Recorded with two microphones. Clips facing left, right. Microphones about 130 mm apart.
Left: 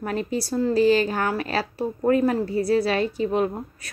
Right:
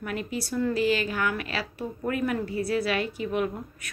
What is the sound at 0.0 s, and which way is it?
A woman's voice, 35° left (ahead or behind).